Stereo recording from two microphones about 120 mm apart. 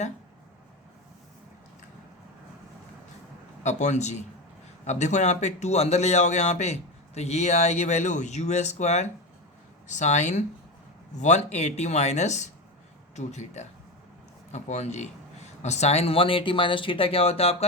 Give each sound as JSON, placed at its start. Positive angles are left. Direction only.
{"t": 3.6, "sound": "speech", "side_deg": 80}